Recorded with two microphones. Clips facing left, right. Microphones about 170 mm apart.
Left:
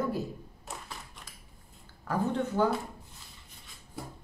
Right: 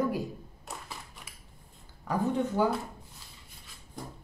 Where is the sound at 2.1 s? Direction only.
15° right (ahead or behind).